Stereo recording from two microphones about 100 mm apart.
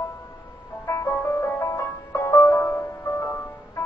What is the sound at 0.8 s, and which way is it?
Music, 30° left (ahead or behind).